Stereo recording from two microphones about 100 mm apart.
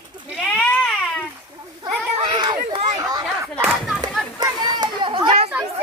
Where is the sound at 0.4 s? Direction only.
10° left (ahead or behind).